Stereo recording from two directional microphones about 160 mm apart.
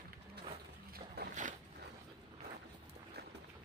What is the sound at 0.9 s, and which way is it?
Boat, 85° right.